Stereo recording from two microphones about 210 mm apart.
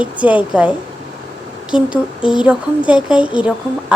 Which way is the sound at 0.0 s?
5° right (ahead or behind).